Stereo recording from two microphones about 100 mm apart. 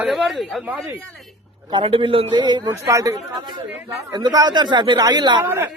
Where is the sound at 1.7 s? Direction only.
60° right (ahead or behind).